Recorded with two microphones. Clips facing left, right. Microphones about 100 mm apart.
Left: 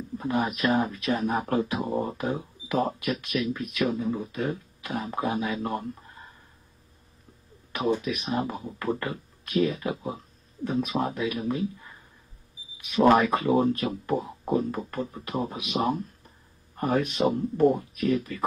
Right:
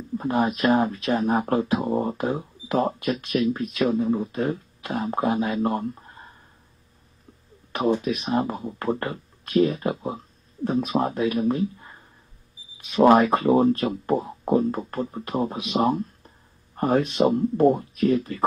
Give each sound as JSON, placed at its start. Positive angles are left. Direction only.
{"t": 0.2, "sound": "speech", "side_deg": -35}
{"t": 7.7, "sound": "speech", "side_deg": -35}